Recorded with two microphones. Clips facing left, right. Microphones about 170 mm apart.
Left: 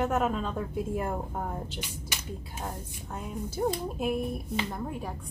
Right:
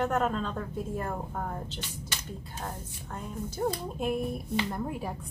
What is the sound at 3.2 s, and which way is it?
A woman's voice, 10° left (ahead or behind).